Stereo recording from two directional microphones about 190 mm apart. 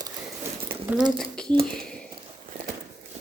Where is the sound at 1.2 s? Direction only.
5° left (ahead or behind).